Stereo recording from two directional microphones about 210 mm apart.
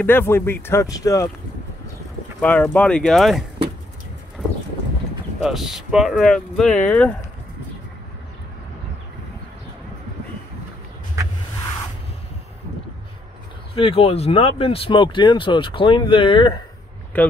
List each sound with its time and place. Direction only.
0.0 s speech: 10° left (ahead or behind)
2.4 s speech: 5° left (ahead or behind)
5.4 s speech: centre (ahead or behind)
13.7 s speech: 25° left (ahead or behind)
17.1 s speech: 10° left (ahead or behind)